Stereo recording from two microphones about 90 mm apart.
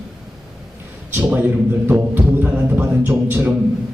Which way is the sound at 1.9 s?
20° right (ahead or behind).